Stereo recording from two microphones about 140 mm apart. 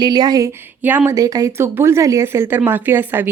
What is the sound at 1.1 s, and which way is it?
Speech, 25° right (ahead or behind).